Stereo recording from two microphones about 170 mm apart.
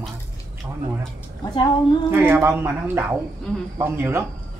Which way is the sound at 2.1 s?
10° right (ahead or behind).